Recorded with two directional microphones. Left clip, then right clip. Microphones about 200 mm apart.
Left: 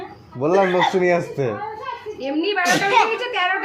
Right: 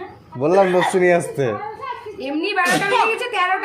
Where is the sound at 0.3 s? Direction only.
15° right (ahead or behind).